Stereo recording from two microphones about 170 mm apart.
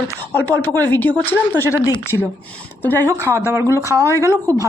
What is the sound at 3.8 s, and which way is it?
Speech, 20° left (ahead or behind).